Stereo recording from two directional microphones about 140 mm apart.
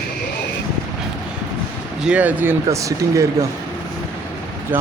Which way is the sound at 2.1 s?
10° right (ahead or behind).